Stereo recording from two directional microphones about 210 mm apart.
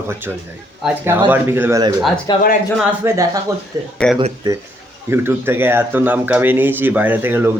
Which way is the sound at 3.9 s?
5° left (ahead or behind).